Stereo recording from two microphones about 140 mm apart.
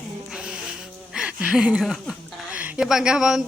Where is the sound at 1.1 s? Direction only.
5° right (ahead or behind).